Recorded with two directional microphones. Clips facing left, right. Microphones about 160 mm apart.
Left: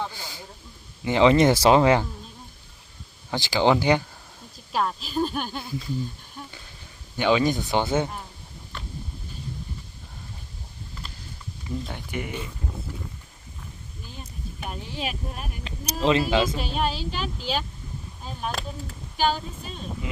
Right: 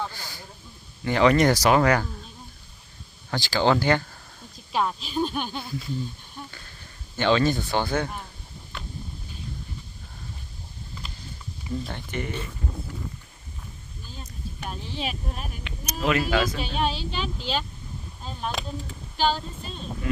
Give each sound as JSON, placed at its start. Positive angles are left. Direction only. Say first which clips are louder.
{"t": 0.0, "sound": "snake", "louder": "left 1 dB", "side_deg": 15}
{"t": 1.0, "sound": "speech", "louder": "left 2 dB", "side_deg": 20}
{"t": 3.3, "sound": "speech", "louder": "left 1 dB", "side_deg": 20}
{"t": 4.7, "sound": "a woman's voice", "louder": "even", "side_deg": 0}
{"t": 7.2, "sound": "speech", "louder": "even", "side_deg": 10}
{"t": 11.8, "sound": "speech", "louder": "even", "side_deg": 5}
{"t": 14.2, "sound": "a sound", "louder": "even", "side_deg": 10}
{"t": 15.6, "sound": "speech", "louder": "left 3 dB", "side_deg": 30}
{"t": 16.6, "sound": "a woman's voice", "louder": "even", "side_deg": 5}
{"t": 18.2, "sound": "a sound", "louder": "even", "side_deg": 10}
{"t": 19.1, "sound": "speech", "louder": "even", "side_deg": 10}